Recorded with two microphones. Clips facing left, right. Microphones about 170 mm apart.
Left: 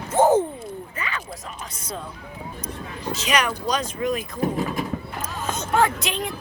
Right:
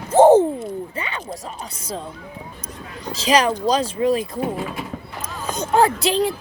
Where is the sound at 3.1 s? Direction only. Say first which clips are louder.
Right 6 dB; 30° right (ahead or behind).